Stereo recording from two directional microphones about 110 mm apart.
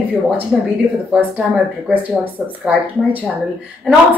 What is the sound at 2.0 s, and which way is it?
Speech, 15° right (ahead or behind).